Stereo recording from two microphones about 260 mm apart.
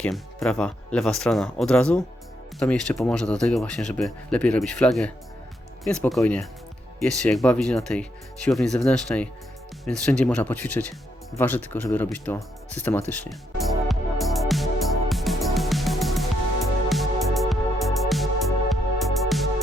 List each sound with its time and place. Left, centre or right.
0.0 s speech: centre
13.7 s music: centre